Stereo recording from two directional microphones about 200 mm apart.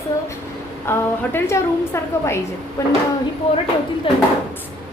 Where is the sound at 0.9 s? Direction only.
10° left (ahead or behind).